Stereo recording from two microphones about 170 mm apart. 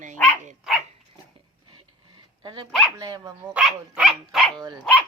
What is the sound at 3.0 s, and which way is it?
Speech, 25° right (ahead or behind).